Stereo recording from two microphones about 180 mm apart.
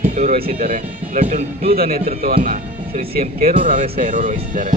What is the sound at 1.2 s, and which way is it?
Speech, 35° right (ahead or behind).